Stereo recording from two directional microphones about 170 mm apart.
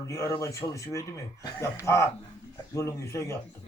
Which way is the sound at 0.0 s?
15° left (ahead or behind).